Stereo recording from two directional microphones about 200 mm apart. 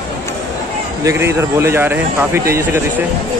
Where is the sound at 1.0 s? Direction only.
15° right (ahead or behind).